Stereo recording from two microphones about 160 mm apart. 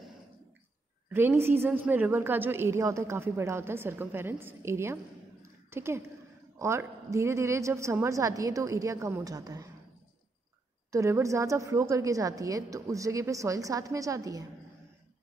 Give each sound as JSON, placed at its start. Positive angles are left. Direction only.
{"t": 1.1, "sound": "a woman's voice", "side_deg": -15}
{"t": 10.9, "sound": "a woman's voice", "side_deg": -15}